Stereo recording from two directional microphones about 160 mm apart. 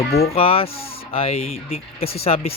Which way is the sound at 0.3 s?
35° left (ahead or behind).